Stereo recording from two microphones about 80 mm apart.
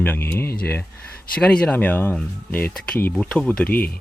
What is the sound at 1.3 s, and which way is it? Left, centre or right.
Speech, centre.